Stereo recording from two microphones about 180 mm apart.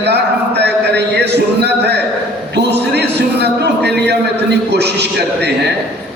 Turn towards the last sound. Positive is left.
turn(degrees=-70)  # may be behind; listen again after turning